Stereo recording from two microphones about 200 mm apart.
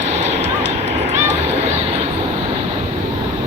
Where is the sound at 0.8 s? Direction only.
35° right (ahead or behind).